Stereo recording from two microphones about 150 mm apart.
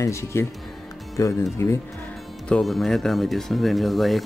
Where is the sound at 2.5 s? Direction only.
Centre (ahead or behind).